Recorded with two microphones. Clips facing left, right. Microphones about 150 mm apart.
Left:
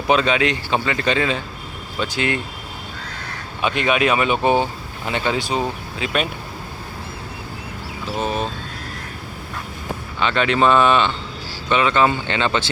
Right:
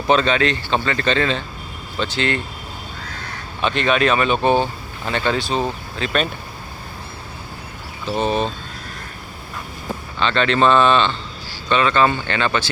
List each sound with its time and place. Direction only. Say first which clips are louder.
0.1 s speech: right 1 dB; 10° left (ahead or behind)
3.6 s speech: right 1 dB; 10° left (ahead or behind)
8.2 s speech: right 3 dB; 5° left (ahead or behind)
10.2 s speech: right 1 dB; 10° left (ahead or behind)